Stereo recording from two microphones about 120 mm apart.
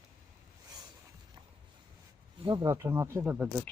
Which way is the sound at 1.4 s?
35° right (ahead or behind).